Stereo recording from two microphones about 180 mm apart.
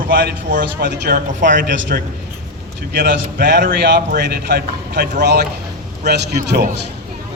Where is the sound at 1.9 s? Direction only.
60° right (ahead or behind).